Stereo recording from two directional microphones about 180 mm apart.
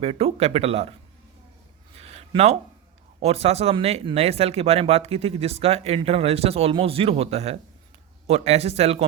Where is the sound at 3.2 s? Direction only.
35° right (ahead or behind).